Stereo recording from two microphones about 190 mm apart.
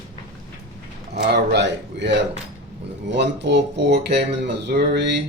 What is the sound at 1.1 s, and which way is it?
Speech, 60° right (ahead or behind).